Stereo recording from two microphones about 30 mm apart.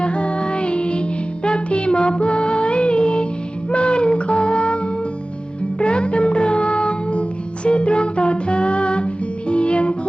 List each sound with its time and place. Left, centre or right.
0.0 s child singing: left
1.5 s music: left
5.8 s music: left